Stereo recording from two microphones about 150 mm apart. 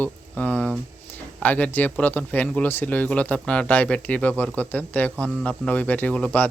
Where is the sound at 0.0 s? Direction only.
10° left (ahead or behind).